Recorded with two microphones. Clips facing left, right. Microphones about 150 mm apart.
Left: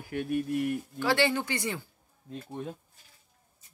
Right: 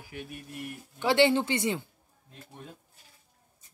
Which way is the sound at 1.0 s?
20° right (ahead or behind).